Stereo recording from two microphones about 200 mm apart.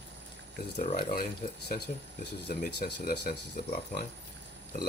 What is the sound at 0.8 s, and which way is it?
Speech, 45° left (ahead or behind).